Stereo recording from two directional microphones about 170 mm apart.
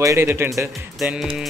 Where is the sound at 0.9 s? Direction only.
5° right (ahead or behind).